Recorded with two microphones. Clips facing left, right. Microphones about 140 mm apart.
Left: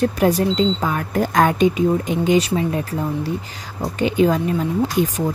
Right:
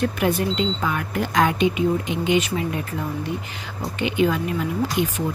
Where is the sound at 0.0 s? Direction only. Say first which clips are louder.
Left 4 dB; 35° left (ahead or behind).